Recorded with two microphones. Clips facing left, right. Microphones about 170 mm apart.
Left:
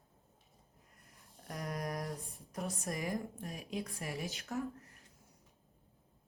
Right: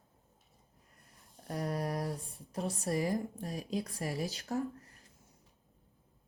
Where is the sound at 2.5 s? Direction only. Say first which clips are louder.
Right 5 dB; 35° right (ahead or behind).